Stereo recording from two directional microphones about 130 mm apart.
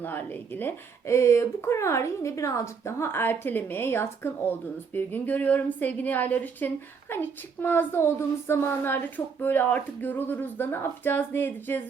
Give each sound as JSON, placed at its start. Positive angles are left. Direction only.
{"t": 0.0, "sound": "a woman's voice", "side_deg": 15}